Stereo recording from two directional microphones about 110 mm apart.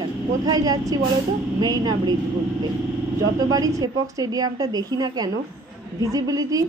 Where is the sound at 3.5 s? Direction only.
35° right (ahead or behind).